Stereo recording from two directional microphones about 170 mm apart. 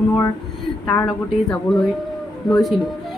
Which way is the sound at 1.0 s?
Centre (ahead or behind).